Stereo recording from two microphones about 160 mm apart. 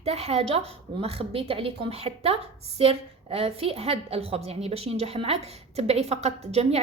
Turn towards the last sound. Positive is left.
turn(degrees=-40)  # may be behind; listen again after turning